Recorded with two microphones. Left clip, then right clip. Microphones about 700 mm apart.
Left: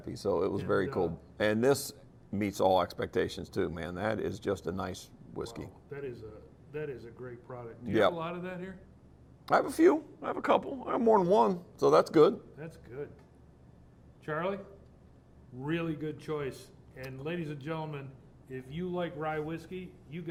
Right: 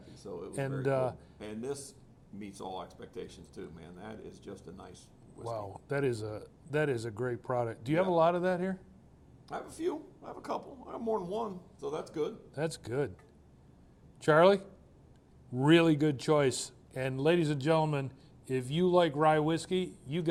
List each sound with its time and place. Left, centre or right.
0.1 s speech: left
5.9 s a man's voice: right
9.5 s speech: left
12.5 s a man's voice: right
14.3 s a man's voice: right
15.6 s a man's voice: right